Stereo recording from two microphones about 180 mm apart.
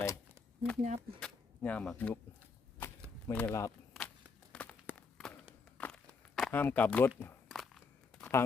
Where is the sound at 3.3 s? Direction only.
10° left (ahead or behind).